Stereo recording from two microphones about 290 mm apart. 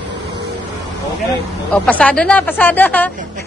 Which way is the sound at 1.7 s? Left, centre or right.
Centre.